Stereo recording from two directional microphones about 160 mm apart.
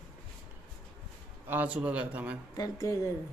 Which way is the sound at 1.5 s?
10° right (ahead or behind).